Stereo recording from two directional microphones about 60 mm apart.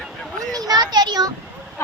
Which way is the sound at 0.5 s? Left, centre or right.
Right.